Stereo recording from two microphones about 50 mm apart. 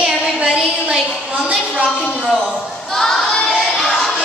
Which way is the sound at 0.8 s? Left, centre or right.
Centre.